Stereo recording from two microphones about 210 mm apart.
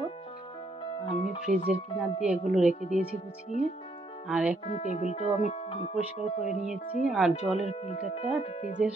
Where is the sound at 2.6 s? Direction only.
35° left (ahead or behind).